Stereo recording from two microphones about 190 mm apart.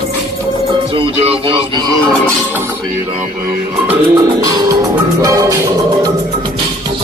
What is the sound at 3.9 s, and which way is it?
Music, 10° right (ahead or behind).